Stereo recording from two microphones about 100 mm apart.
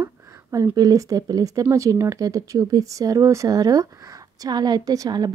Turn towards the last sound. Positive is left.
turn(degrees=-40)  # may be behind; listen again after turning